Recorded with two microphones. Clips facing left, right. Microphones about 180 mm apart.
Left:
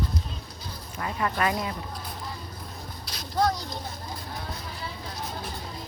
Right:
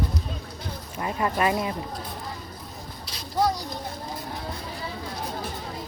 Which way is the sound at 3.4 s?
10° right (ahead or behind).